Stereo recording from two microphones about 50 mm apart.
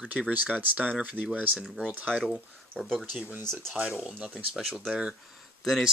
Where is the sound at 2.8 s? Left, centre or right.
Centre.